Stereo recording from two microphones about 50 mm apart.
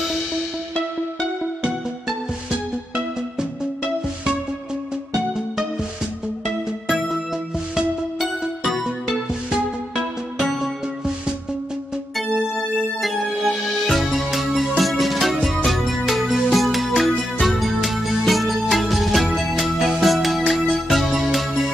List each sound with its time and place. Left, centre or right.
6.4 s music: centre
8.2 s music: centre
9.1 s music: centre
13.0 s music: centre